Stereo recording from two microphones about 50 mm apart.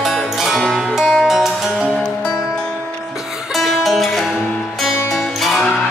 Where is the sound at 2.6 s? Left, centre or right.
Centre.